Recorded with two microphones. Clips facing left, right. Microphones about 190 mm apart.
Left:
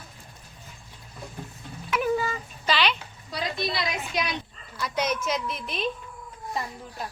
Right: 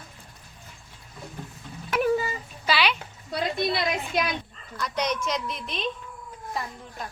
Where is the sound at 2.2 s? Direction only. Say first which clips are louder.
Left 1 dB; 10° right (ahead or behind).